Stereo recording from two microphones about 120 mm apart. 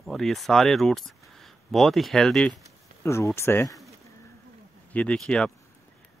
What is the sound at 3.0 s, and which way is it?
Speech, 25° left (ahead or behind).